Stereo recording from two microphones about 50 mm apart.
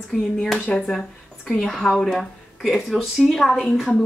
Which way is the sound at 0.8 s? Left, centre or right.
Centre.